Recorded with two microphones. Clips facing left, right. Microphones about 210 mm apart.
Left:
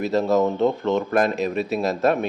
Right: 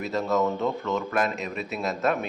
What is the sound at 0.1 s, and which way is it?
Speech, 35° left (ahead or behind).